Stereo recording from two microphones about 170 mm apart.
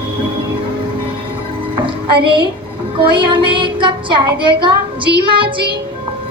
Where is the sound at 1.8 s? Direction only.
30° right (ahead or behind).